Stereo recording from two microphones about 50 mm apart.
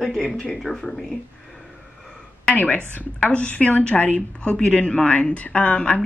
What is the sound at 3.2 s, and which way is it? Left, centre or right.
Speech, left.